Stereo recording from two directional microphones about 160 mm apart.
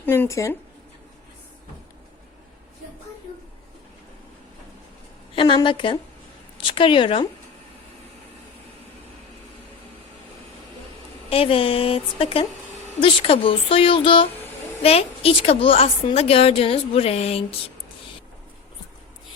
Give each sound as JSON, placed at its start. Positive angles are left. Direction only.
{"t": 0.0, "sound": "speech", "side_deg": 15}
{"t": 5.3, "sound": "a woman's voice", "side_deg": 30}
{"t": 11.3, "sound": "a woman's voice", "side_deg": 35}